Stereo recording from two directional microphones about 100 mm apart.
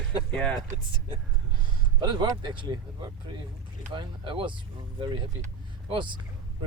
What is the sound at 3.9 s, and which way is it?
Speech, 60° right (ahead or behind).